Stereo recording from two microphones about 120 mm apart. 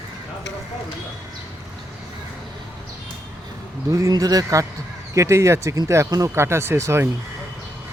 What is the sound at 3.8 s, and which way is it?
Speech, 30° right (ahead or behind).